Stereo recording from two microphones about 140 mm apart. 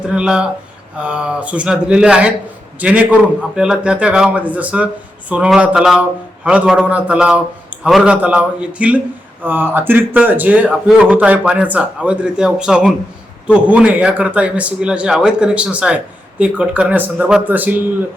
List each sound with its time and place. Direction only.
0.1 s a man's voice: 5° right (ahead or behind)